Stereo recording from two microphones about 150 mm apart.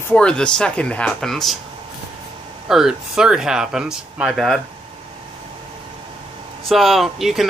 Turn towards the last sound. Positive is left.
turn(degrees=0)  # may be behind; listen again after turning